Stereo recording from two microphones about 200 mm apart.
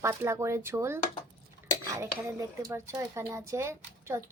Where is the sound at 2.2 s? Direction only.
15° right (ahead or behind).